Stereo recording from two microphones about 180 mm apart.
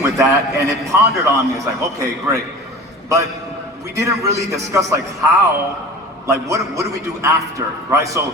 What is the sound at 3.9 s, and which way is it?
A man's voice, 20° right (ahead or behind).